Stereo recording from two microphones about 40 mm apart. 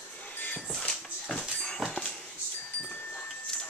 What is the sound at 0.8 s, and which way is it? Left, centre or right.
Dog, centre.